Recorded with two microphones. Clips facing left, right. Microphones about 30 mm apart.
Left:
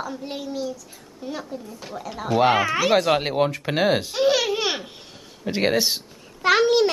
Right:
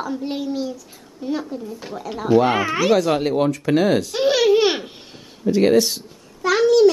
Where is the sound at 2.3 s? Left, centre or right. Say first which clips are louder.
Right 2 dB; centre.